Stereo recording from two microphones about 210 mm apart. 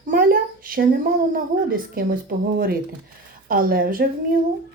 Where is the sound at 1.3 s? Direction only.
45° right (ahead or behind).